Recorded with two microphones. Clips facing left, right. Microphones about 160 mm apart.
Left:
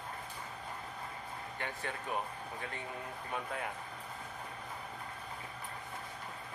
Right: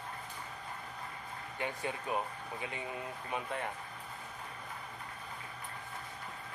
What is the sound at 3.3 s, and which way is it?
Speech, centre (ahead or behind).